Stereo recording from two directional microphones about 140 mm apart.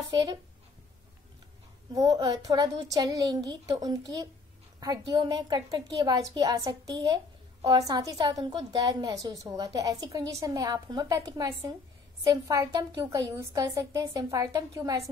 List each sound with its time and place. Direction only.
0.1 s speech: 30° right (ahead or behind)
2.0 s a woman's voice: 25° right (ahead or behind)